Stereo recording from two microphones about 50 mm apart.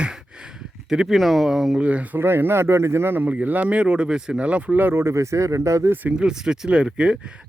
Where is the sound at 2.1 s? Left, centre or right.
Right.